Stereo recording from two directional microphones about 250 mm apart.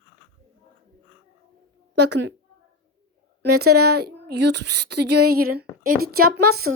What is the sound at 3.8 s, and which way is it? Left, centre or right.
Speech, right.